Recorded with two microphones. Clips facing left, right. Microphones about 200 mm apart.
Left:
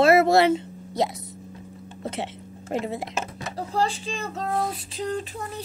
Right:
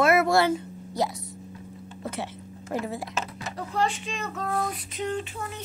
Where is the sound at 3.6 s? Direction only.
30° left (ahead or behind).